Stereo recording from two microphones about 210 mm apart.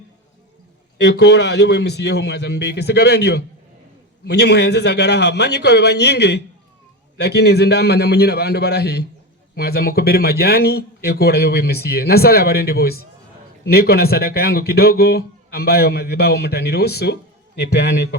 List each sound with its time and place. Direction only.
0.9 s speech: 55° left (ahead or behind)